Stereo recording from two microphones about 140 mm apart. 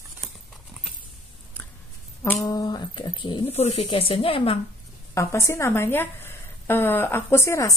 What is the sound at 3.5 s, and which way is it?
Speech, 50° left (ahead or behind).